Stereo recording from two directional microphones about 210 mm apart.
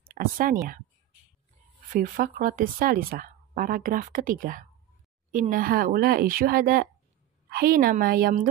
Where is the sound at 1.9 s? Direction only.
40° right (ahead or behind).